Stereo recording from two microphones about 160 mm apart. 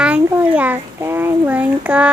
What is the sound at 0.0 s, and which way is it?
A child's voice, 10° right (ahead or behind).